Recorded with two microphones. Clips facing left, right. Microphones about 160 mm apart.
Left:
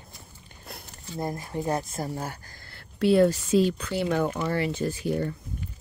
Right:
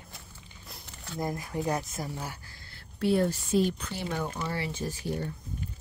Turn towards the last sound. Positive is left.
turn(degrees=65)  # may be behind; listen again after turning